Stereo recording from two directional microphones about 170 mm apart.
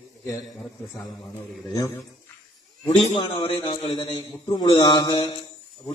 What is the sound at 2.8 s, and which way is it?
A man's voice, 30° left (ahead or behind).